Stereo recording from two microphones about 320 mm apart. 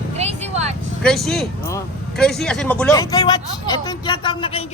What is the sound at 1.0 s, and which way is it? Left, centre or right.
Speech, centre.